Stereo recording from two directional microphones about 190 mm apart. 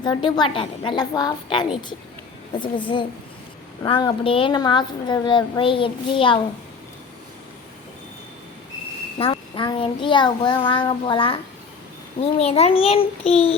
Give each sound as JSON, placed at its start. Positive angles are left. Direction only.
{"t": 0.0, "sound": "a woman's voice", "side_deg": 25}
{"t": 9.1, "sound": "a woman's voice", "side_deg": 25}
{"t": 12.4, "sound": "a child's voice", "side_deg": 35}